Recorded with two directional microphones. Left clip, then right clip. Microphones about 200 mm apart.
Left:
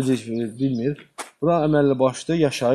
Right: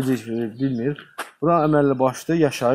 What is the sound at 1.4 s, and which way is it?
A man's voice, 20° left (ahead or behind).